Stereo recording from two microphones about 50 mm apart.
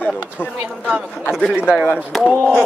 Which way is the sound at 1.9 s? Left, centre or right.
Centre.